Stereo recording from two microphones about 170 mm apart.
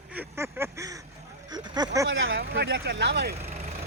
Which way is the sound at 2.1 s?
80° right.